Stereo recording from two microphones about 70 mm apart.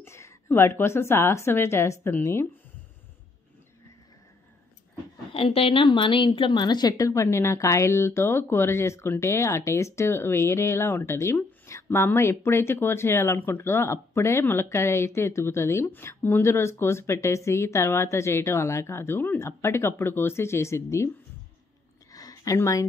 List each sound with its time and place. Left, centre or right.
0.0 s a woman's voice: left
6.2 s a woman's voice: left
7.1 s speech: left
22.1 s a sound: left